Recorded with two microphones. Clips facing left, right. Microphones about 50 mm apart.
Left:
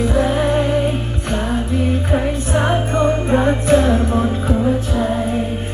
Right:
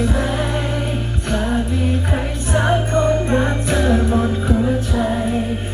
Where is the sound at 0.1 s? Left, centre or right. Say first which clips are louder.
Left 4 dB; centre.